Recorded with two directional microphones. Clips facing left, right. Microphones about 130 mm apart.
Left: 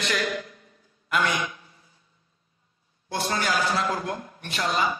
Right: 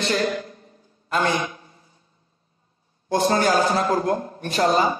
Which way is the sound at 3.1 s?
40° right (ahead or behind).